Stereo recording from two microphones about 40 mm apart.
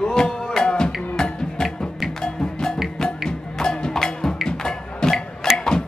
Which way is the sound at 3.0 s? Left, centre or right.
Centre.